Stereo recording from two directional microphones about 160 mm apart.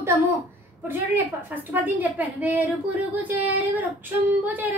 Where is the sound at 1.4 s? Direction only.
10° right (ahead or behind).